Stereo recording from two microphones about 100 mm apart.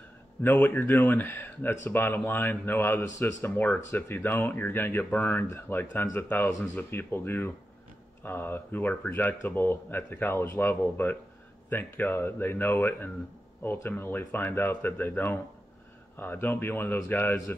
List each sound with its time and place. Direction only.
0.4 s speech: 20° left (ahead or behind)